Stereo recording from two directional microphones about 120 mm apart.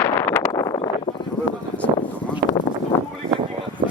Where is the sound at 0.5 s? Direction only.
30° left (ahead or behind).